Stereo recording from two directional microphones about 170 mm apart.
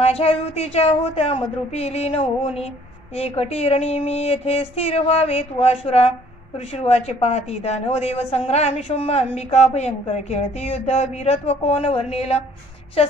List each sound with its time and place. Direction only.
0.0 s a woman's voice: 35° left (ahead or behind)